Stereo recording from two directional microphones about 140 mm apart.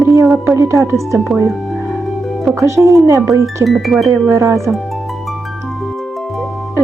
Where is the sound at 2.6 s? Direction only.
20° right (ahead or behind).